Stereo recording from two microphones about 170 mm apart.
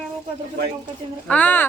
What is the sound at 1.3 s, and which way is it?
Speech, 10° left (ahead or behind).